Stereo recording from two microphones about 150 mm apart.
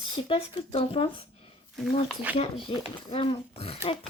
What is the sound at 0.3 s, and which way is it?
Speech, 40° left (ahead or behind).